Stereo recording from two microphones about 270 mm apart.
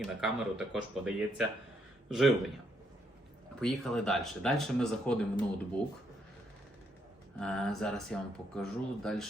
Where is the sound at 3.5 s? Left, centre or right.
Centre.